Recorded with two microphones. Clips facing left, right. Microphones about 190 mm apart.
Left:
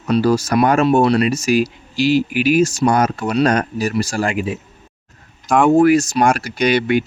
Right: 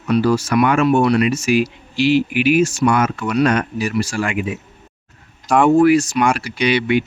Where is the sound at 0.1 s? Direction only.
40° left (ahead or behind).